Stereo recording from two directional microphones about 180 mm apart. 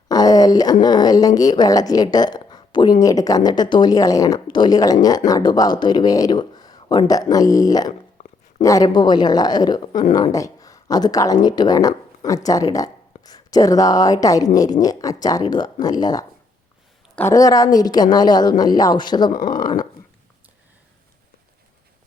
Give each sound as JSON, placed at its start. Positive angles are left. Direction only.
{"t": 0.1, "sound": "speech", "side_deg": 20}
{"t": 19.3, "sound": "speech", "side_deg": 50}
{"t": 19.5, "sound": "speech", "side_deg": 20}